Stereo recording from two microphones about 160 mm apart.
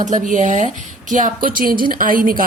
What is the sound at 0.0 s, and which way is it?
A woman's voice, 50° right (ahead or behind).